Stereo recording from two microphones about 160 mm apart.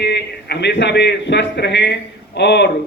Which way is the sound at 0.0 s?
90° left.